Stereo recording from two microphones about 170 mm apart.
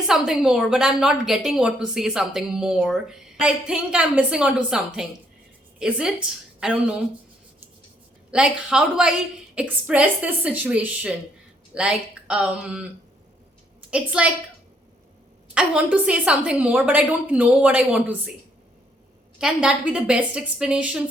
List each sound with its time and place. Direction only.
0.1 s a woman's voice: 5° right (ahead or behind)
8.3 s a woman's voice: 5° right (ahead or behind)
13.9 s a woman's voice: 5° right (ahead or behind)
15.5 s a woman's voice: 5° right (ahead or behind)
19.4 s a woman's voice: 5° right (ahead or behind)